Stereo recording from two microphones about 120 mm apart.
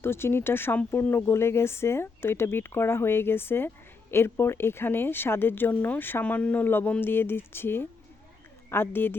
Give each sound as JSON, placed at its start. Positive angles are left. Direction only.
{"t": 0.0, "sound": "speech", "side_deg": 20}